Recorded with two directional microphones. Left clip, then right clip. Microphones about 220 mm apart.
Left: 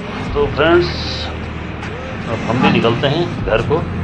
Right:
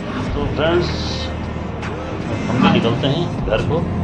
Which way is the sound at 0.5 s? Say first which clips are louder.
Left 4 dB; 15° left (ahead or behind).